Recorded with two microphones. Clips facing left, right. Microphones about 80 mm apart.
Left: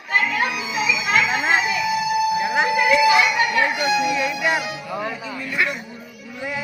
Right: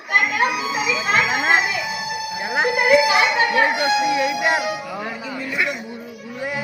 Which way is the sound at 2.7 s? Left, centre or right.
Centre.